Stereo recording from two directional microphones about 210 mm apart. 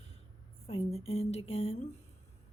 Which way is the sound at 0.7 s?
30° left (ahead or behind).